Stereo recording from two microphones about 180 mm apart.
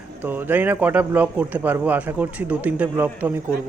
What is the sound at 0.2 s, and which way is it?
A man's voice, 10° right (ahead or behind).